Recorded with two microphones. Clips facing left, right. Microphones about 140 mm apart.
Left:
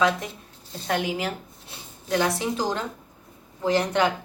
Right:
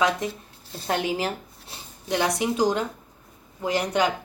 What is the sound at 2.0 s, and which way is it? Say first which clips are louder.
A woman's voice: even; 15° right (ahead or behind).